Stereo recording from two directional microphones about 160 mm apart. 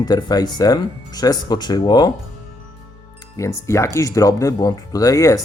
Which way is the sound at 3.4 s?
20° left (ahead or behind).